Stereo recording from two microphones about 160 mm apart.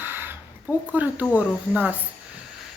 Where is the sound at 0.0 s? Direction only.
15° right (ahead or behind).